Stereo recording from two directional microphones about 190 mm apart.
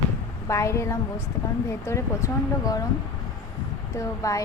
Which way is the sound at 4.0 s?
15° left (ahead or behind).